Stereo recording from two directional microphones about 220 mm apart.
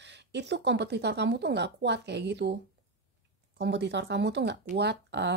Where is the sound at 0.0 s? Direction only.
50° right (ahead or behind).